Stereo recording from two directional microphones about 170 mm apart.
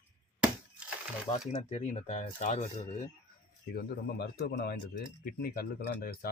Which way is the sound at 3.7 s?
70° left (ahead or behind).